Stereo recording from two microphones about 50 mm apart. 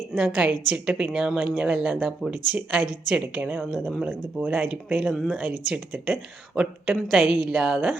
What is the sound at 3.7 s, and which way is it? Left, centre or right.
Speech, centre.